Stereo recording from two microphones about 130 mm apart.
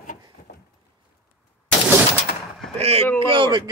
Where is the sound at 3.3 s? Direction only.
35° right (ahead or behind).